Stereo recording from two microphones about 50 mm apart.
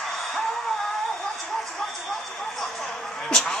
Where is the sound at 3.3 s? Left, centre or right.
Centre.